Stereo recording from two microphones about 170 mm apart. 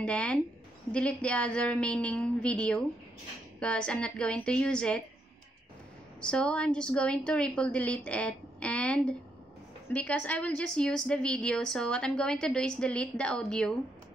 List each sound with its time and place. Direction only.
0.0 s a woman's voice: 5° left (ahead or behind)
6.2 s a woman's voice: 5° left (ahead or behind)